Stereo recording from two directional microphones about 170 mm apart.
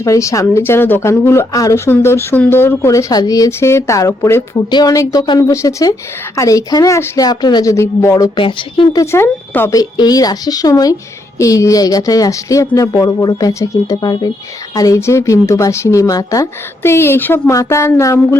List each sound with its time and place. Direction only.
0.0 s a woman's voice: 20° left (ahead or behind)